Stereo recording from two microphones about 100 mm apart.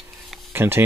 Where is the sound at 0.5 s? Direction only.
25° right (ahead or behind).